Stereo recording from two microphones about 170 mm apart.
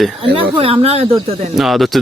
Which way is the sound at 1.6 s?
Centre (ahead or behind).